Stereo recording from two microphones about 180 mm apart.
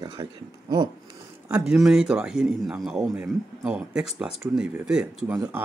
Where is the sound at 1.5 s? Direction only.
5° right (ahead or behind).